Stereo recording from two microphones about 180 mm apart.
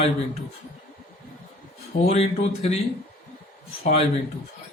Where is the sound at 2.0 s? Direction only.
35° left (ahead or behind).